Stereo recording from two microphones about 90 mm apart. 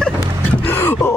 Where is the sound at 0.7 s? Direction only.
25° left (ahead or behind).